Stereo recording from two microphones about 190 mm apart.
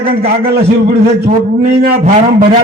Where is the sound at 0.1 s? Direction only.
55° right (ahead or behind).